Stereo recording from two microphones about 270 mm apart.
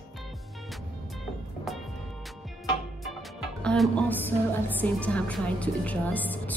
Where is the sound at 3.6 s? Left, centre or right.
Centre.